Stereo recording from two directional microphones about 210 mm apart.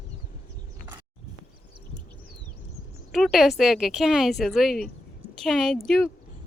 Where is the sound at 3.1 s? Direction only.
Centre (ahead or behind).